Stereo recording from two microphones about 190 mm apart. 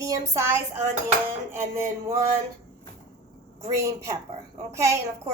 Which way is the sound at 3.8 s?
15° right (ahead or behind).